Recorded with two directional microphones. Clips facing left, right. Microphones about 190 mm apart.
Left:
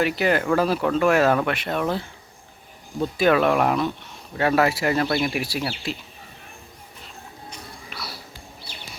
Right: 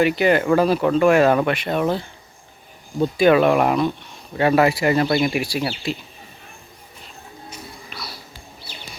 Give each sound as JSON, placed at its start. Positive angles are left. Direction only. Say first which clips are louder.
{"t": 0.0, "sound": "speech", "louder": "right 4 dB", "side_deg": 0}
{"t": 7.9, "sound": "music", "louder": "even", "side_deg": 10}